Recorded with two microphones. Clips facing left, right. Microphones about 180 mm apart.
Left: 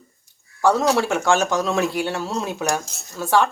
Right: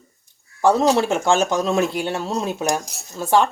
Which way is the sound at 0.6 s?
25° right (ahead or behind).